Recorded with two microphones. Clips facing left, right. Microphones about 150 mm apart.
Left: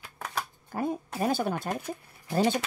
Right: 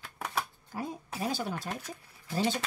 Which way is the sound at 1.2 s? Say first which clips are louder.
Left 5 dB; 55° left (ahead or behind).